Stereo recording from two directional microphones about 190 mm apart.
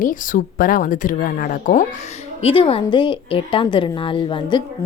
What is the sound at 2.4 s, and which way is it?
A woman's voice, 30° left (ahead or behind).